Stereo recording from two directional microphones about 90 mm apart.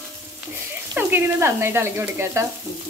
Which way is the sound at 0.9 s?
25° right (ahead or behind).